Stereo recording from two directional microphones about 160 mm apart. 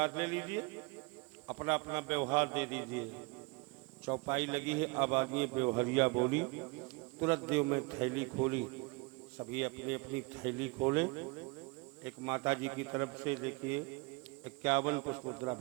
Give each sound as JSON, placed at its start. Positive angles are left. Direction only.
{"t": 0.0, "sound": "a man's voice", "side_deg": -10}